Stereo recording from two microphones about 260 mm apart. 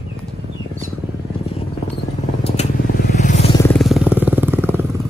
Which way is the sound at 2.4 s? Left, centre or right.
Left.